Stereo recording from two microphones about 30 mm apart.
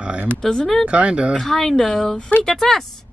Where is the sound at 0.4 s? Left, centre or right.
Left.